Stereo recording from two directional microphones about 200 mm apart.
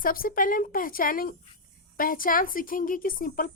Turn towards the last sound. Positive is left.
turn(degrees=45)  # may be behind; listen again after turning